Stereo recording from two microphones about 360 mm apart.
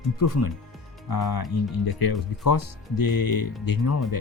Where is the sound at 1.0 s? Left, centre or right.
Left.